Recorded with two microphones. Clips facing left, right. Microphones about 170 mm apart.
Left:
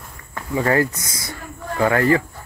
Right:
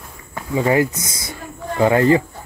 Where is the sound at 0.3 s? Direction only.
15° right (ahead or behind).